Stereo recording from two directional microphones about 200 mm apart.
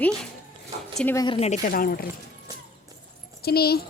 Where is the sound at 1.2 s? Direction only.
30° left (ahead or behind); by 2.1 s 45° left (ahead or behind).